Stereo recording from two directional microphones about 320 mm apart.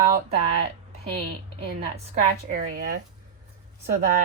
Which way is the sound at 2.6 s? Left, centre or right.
Right.